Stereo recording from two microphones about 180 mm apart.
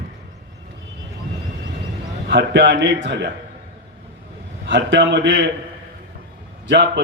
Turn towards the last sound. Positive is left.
turn(degrees=-70)  # may be behind; listen again after turning